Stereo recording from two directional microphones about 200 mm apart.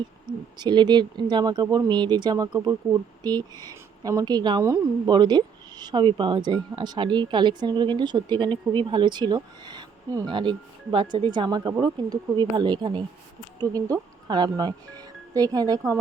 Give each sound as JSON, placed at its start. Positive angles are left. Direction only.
{"t": 0.3, "sound": "speech", "side_deg": -20}